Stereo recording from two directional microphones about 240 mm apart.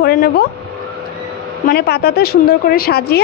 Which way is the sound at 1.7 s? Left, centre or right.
Left.